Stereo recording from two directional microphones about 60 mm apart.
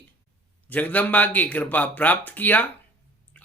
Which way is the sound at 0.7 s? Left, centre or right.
Left.